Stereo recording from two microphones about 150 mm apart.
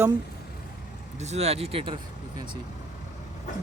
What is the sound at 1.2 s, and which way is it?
Speech, 45° right (ahead or behind).